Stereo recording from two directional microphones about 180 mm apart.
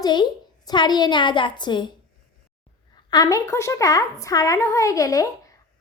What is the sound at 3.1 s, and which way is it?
Speech, 20° left (ahead or behind).